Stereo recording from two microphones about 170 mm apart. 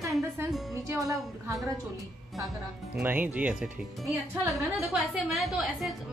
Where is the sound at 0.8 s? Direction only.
20° right (ahead or behind).